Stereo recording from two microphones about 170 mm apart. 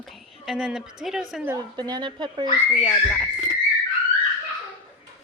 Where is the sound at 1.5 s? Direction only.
25° right (ahead or behind).